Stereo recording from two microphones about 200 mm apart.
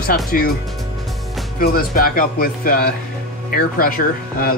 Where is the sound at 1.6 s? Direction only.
50° left (ahead or behind).